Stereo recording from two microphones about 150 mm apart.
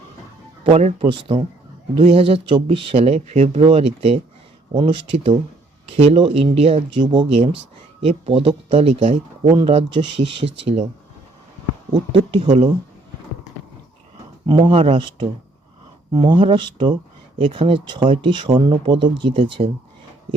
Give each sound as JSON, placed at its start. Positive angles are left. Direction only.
{"t": 0.6, "sound": "speech", "side_deg": -45}
{"t": 7.1, "sound": "speech", "side_deg": -30}
{"t": 9.5, "sound": "speech", "side_deg": -35}
{"t": 12.4, "sound": "speech", "side_deg": -45}
{"t": 14.4, "sound": "speech", "side_deg": -30}